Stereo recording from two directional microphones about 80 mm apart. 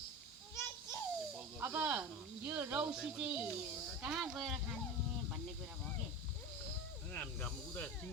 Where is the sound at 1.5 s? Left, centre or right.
Right.